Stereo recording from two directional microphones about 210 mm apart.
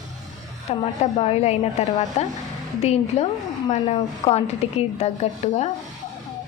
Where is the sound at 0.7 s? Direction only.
30° left (ahead or behind).